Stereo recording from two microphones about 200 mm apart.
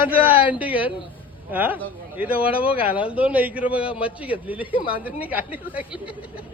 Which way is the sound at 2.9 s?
5° right (ahead or behind).